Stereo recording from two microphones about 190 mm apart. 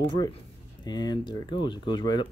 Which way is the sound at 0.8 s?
20° left (ahead or behind).